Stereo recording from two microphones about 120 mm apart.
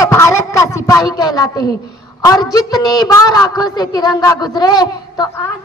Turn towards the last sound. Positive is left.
turn(degrees=35)  # may be behind; listen again after turning